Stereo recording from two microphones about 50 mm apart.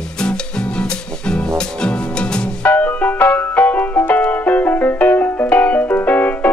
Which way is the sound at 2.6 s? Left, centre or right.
Left.